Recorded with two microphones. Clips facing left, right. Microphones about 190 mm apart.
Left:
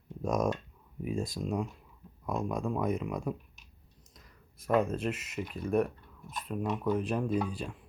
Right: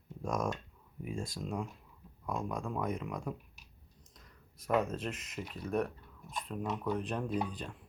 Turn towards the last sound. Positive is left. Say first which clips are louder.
# left 4 dB
turn(degrees=10)  # may be behind; listen again after turning